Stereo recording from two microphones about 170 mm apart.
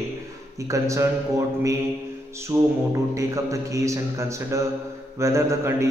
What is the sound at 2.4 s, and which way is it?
A man's voice, 20° right (ahead or behind).